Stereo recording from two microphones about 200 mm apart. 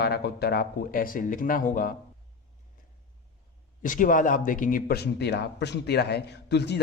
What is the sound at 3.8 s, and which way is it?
A man's voice, 40° left (ahead or behind).